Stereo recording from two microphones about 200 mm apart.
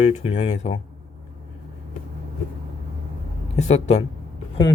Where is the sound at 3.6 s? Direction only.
35° left (ahead or behind).